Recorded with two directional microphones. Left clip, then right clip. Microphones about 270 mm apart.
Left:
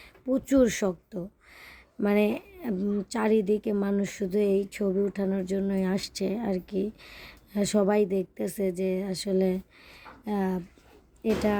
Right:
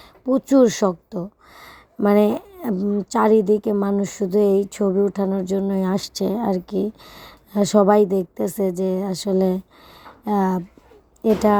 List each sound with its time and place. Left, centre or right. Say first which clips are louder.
0.0 s a woman's voice: right 8 dB; centre